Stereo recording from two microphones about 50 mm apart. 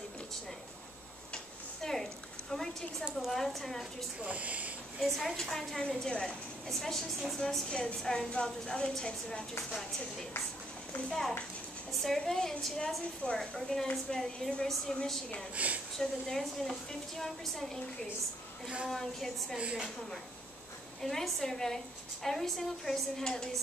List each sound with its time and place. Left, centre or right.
1.8 s a sound: centre
2.5 s a woman's voice: centre
4.2 s speech: right
5.0 s a woman's voice: centre
11.1 s a woman's voice: centre
15.5 s speech: right
16.0 s a woman's voice: centre
18.9 s a woman's voice: centre
19.6 s speech: centre
21.0 s a woman's voice: centre